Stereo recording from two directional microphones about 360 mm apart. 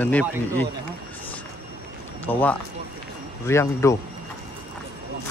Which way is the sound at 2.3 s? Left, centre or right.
Centre.